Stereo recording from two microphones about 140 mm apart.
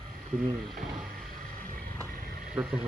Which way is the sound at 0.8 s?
70° right (ahead or behind).